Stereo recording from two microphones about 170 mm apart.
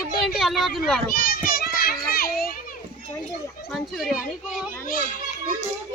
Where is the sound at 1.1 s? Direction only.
60° left (ahead or behind).